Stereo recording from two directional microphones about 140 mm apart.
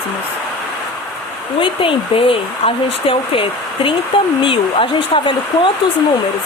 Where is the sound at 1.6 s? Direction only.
40° left (ahead or behind).